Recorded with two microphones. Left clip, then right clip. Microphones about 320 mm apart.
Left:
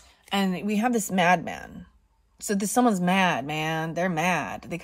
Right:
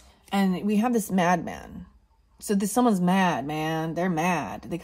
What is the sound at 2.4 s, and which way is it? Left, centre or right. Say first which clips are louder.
Speech: even; left.